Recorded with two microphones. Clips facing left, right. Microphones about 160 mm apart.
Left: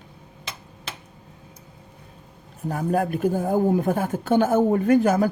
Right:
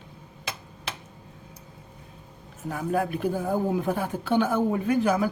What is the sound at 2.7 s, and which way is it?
Speech, 45° left (ahead or behind).